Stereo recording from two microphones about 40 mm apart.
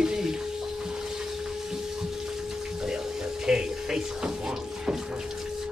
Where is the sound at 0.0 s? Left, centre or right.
Centre.